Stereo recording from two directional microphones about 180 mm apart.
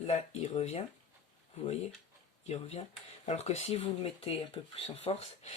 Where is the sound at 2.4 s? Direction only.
35° left (ahead or behind).